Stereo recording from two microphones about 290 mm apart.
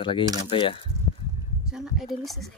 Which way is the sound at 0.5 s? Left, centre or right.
Centre.